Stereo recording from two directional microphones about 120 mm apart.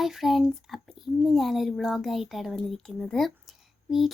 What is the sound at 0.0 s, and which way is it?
A child's voice, centre (ahead or behind).